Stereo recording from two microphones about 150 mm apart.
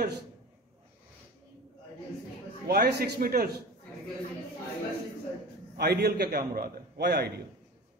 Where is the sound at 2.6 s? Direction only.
90° right.